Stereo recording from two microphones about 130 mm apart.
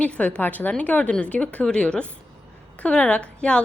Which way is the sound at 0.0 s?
10° left (ahead or behind).